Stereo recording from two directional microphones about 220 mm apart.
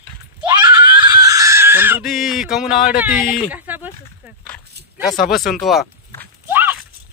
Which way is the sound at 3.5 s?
10° right (ahead or behind).